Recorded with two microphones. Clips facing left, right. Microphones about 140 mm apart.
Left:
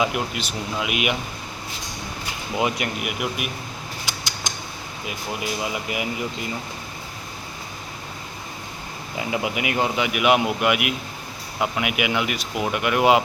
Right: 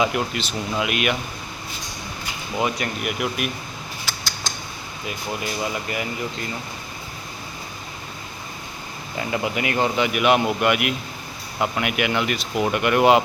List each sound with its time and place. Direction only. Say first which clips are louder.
0.0 s speech: right 2 dB; 5° left (ahead or behind)
2.6 s speech: even; 15° left (ahead or behind)
3.0 s speech: right 2 dB; 5° left (ahead or behind)
4.0 s a sound: right 1 dB; 20° left (ahead or behind)
5.0 s speech: even; 5° left (ahead or behind)
9.1 s speech: right 1 dB; 10° left (ahead or behind)